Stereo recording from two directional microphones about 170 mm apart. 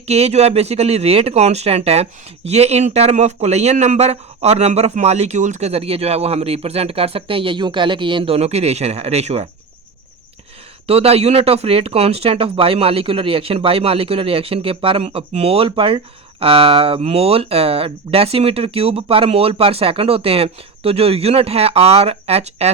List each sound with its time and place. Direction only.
0.1 s speech: 40° right (ahead or behind)
10.8 s speech: 35° right (ahead or behind)